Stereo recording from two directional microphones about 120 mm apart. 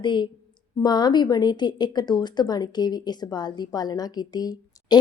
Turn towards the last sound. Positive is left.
turn(degrees=35)  # may be behind; listen again after turning